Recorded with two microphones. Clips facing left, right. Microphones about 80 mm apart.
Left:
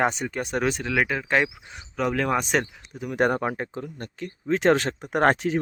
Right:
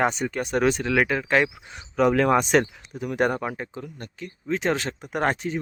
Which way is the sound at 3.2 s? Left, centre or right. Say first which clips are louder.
Left 2 dB; left.